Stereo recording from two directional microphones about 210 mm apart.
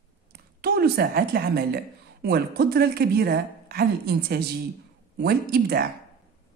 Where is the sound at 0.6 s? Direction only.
45° right (ahead or behind).